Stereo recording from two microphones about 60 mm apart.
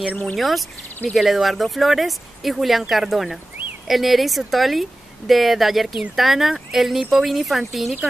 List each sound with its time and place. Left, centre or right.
0.1 s speech: left
0.4 s speech: centre